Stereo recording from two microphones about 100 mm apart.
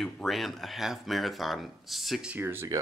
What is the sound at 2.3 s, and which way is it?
Speech, 20° right (ahead or behind).